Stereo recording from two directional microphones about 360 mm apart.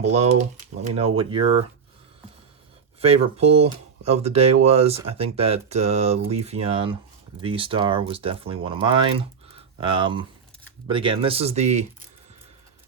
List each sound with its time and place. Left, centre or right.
0.0 s speech: centre
3.0 s speech: centre